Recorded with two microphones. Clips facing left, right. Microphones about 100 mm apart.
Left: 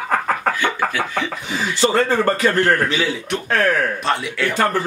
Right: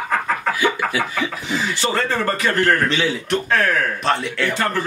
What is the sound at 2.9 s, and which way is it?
Speech, centre (ahead or behind).